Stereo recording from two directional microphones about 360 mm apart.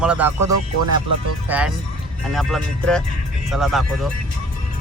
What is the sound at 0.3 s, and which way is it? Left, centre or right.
Speech, right.